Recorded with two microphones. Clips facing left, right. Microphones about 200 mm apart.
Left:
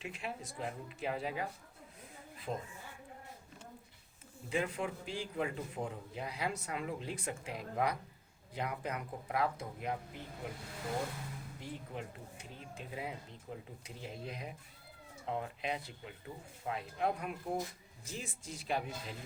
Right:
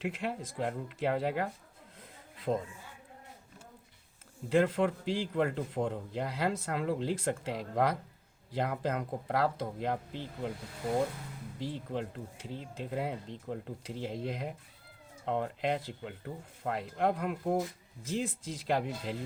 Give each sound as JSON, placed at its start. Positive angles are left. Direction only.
{"t": 0.0, "sound": "speech", "side_deg": -90}
{"t": 2.0, "sound": "a sound", "side_deg": -90}
{"t": 4.4, "sound": "a man's voice", "side_deg": -90}
{"t": 11.6, "sound": "a man's voice", "side_deg": -90}
{"t": 15.3, "sound": "a man's voice", "side_deg": -75}